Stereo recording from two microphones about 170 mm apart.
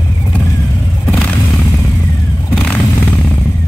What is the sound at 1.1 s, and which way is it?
Vehicle, 5° left (ahead or behind).